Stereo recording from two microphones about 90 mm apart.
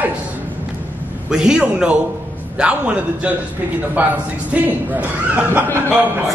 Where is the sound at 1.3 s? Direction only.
10° right (ahead or behind).